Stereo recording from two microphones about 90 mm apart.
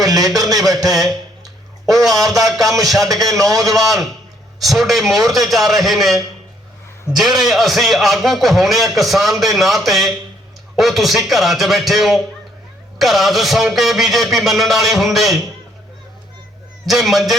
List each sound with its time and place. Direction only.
0.1 s a man's voice: 45° right (ahead or behind)
2.0 s a man's voice: centre (ahead or behind)
3.4 s a man's voice: 40° right (ahead or behind)
3.8 s a man's voice: centre (ahead or behind)
7.2 s a man's voice: centre (ahead or behind)
16.8 s a man's voice: centre (ahead or behind)